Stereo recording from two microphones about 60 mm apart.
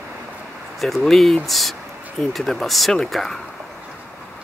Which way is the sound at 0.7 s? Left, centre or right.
Centre.